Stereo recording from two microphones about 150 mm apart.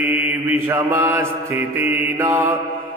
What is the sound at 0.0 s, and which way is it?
Mantra, 10° right (ahead or behind).